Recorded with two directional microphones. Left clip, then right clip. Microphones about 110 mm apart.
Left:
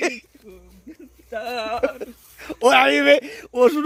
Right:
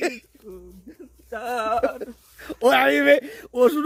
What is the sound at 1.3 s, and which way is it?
Speech, 35° right (ahead or behind).